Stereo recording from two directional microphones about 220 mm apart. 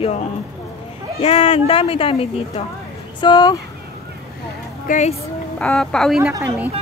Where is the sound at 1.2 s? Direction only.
25° left (ahead or behind).